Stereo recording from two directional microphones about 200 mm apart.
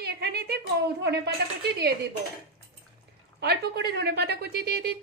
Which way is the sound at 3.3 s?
55° right (ahead or behind).